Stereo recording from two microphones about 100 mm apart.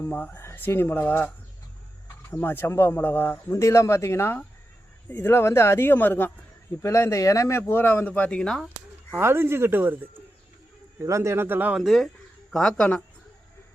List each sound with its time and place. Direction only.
0.0 s speech: 20° left (ahead or behind)
2.3 s speech: 20° left (ahead or behind)
6.8 s speech: 30° left (ahead or behind); by 8.7 s 5° left (ahead or behind)
9.1 s speech: 25° right (ahead or behind)
11.7 s speech: 5° right (ahead or behind)